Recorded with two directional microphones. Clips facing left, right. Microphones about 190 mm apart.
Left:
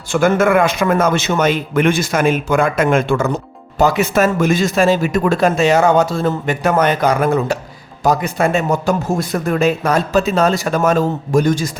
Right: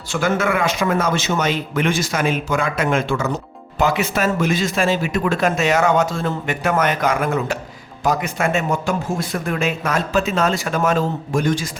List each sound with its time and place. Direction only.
0.1 s a man's voice: 50° left (ahead or behind)
3.8 s speech: 40° left (ahead or behind)